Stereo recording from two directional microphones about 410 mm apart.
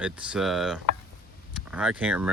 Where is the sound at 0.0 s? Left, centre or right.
Centre.